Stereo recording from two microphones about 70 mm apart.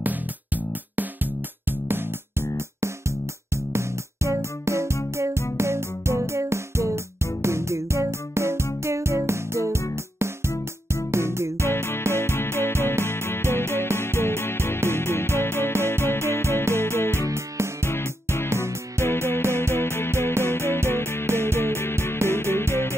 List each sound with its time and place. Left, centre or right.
0.0 s music: right
3.7 s music: right
11.6 s music: left
18.5 s music: right
19.0 s music: left